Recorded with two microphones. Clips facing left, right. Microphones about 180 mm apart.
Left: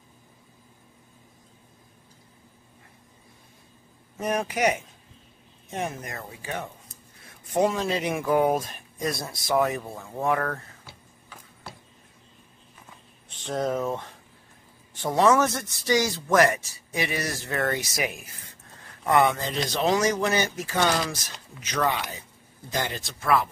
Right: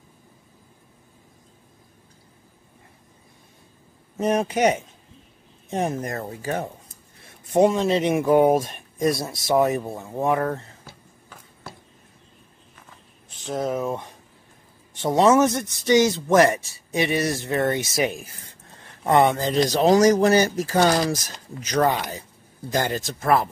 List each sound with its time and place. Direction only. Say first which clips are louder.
4.2 s speech: right 5 dB; 25° right (ahead or behind)
7.5 s speech: right 6 dB; 25° right (ahead or behind)
10.9 s a sound: right 2 dB; 45° right (ahead or behind)
13.4 s speech: right 1 dB; 5° right (ahead or behind)
15.0 s speech: right 4 dB; 20° right (ahead or behind); by 23.5 s 40° right (ahead or behind)